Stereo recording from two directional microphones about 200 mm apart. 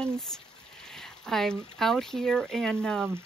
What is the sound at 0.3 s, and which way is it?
Speech, 5° left (ahead or behind).